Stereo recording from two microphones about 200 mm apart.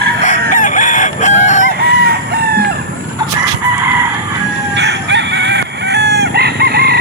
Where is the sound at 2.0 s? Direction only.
50° right (ahead or behind).